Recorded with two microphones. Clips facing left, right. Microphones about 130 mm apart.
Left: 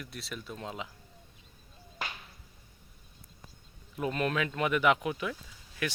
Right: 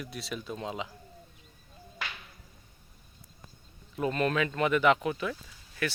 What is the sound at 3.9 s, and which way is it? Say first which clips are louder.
Speech: right 3 dB; 5° left (ahead or behind).